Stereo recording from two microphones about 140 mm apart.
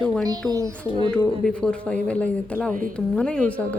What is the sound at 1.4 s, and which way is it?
A woman's voice, 5° left (ahead or behind).